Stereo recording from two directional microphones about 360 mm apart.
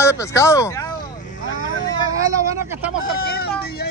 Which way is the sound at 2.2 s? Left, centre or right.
Centre.